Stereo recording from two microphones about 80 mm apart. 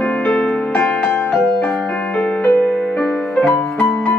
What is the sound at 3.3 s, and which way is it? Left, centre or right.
Music, centre.